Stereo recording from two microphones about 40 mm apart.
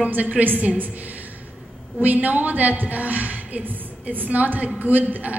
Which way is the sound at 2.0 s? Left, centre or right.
Right.